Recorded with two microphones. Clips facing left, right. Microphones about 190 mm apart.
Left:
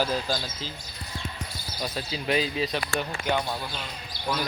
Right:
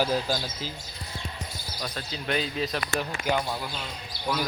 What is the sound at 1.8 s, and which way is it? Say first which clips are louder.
Speech: left 3 dB; 5° left (ahead or behind).